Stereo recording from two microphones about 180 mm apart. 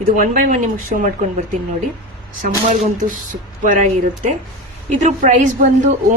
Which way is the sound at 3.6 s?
45° right (ahead or behind).